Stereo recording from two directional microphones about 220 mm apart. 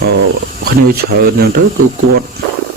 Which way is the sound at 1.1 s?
45° right (ahead or behind).